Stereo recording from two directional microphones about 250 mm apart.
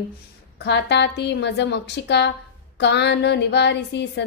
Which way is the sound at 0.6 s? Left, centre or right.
Left.